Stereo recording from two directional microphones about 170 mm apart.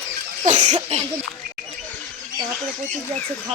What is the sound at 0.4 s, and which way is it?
Cough, 45° right (ahead or behind).